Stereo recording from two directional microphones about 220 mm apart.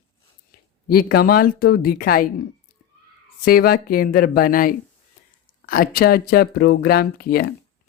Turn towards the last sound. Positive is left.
turn(degrees=45)  # may be behind; listen again after turning